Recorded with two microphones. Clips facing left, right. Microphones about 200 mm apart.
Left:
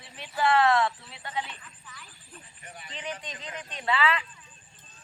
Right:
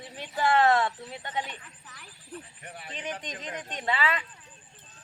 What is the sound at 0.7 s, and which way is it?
Speech, 40° right (ahead or behind).